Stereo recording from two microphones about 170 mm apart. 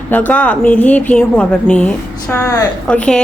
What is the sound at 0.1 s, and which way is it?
A woman's voice, 10° left (ahead or behind).